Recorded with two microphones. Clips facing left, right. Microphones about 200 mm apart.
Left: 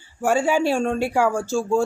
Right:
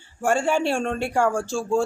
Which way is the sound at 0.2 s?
5° left (ahead or behind).